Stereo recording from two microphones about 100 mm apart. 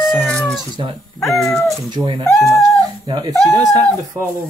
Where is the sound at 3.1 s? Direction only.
40° right (ahead or behind).